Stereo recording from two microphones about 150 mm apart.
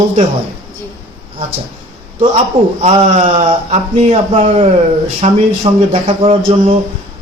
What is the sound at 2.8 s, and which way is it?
A man's voice, 50° right (ahead or behind).